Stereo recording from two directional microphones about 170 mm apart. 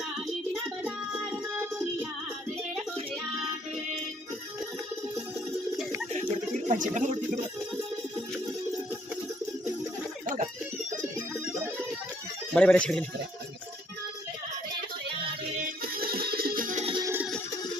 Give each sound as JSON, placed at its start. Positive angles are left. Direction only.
{"t": 0.8, "sound": "music", "side_deg": -10}
{"t": 6.1, "sound": "a sound", "side_deg": -45}
{"t": 12.5, "sound": "speech", "side_deg": 5}
{"t": 15.8, "sound": "music", "side_deg": -60}
{"t": 16.8, "sound": "music", "side_deg": -30}